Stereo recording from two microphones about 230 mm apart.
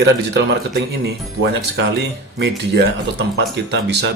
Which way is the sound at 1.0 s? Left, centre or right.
Right.